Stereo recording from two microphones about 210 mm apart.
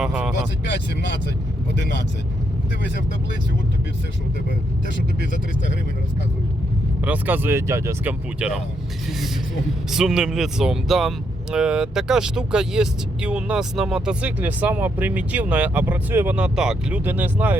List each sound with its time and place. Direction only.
0.0 s speech: 5° right (ahead or behind)
0.6 s speech: 55° left (ahead or behind)
7.0 s speech: 10° right (ahead or behind)
9.9 s speech: centre (ahead or behind)